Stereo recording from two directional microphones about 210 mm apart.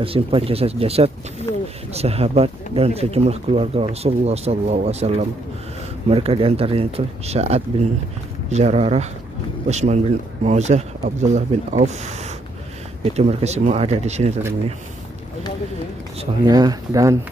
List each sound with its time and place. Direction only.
0.0 s speech: 25° right (ahead or behind)
1.5 s a sound: 15° left (ahead or behind)
2.0 s speech: 30° right (ahead or behind)
16.2 s speech: 20° right (ahead or behind)